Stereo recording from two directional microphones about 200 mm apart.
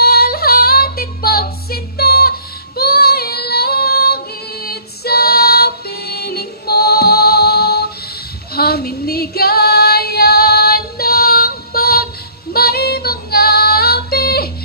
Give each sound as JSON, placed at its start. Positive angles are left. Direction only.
{"t": 0.0, "sound": "female singing", "side_deg": 50}